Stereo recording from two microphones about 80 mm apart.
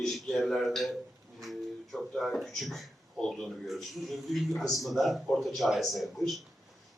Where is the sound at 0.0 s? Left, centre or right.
Centre.